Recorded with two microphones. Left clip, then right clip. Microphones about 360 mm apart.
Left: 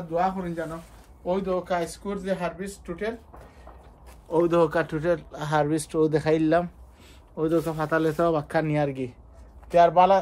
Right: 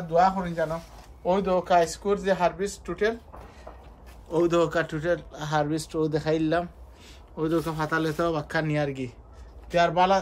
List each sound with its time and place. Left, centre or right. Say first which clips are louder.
0.1 s speech: right 4 dB; centre
4.3 s a man's voice: left 2 dB; centre
7.3 s a man's voice: left 2 dB; centre